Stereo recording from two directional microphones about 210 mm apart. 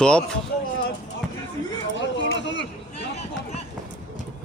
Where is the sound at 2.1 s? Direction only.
60° left (ahead or behind).